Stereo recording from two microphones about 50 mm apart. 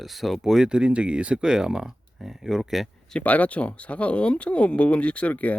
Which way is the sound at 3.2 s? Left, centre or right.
Left.